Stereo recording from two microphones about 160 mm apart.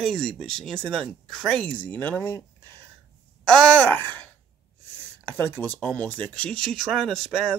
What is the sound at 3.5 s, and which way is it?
Speech, 10° left (ahead or behind).